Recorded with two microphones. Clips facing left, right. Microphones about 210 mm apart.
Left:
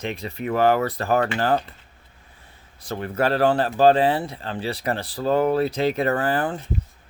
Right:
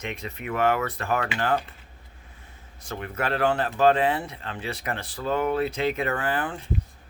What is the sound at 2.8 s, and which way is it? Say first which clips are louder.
Speech: left 6 dB; 35° left (ahead or behind).